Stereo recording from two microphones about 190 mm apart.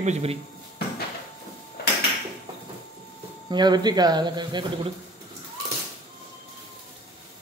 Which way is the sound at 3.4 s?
20° right (ahead or behind).